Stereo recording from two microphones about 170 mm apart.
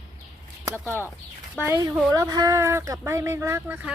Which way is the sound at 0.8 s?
15° left (ahead or behind).